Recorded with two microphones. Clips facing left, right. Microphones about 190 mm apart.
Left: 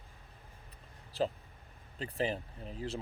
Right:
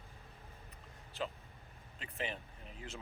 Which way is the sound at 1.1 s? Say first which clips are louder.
Left 8 dB; 35° left (ahead or behind).